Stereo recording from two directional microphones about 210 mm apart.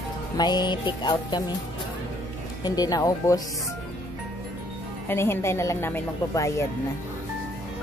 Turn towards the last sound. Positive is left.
turn(degrees=15)  # may be behind; listen again after turning